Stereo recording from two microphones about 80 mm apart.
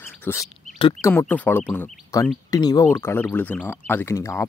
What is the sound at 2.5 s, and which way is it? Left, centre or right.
Speech, left.